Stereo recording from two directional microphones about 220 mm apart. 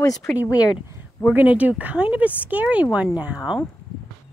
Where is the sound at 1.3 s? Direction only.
5° right (ahead or behind).